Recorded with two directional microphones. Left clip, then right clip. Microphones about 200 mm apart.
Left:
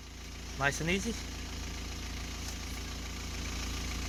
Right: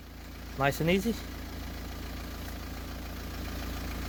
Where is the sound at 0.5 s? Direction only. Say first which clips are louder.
Right 4 dB; 60° right (ahead or behind).